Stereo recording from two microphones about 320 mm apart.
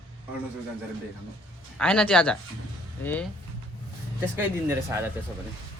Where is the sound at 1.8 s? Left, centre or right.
Centre.